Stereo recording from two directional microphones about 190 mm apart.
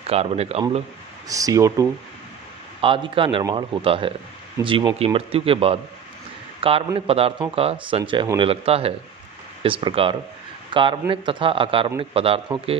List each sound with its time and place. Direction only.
0.0 s speech: 30° right (ahead or behind)
1.3 s speech: 15° right (ahead or behind)
2.8 s speech: 25° right (ahead or behind)